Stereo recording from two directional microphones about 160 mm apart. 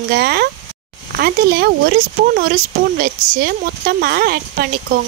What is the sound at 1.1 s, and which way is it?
Speech, 75° right (ahead or behind).